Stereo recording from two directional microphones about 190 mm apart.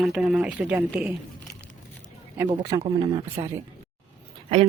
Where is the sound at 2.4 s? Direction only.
20° right (ahead or behind).